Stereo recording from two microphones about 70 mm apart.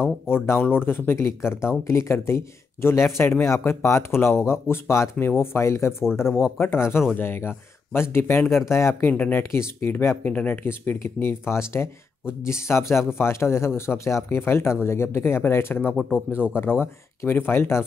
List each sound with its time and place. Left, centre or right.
0.3 s speech: left
9.1 s speech: left
10.6 s speech: left
15.9 s speech: centre
16.8 s speech: left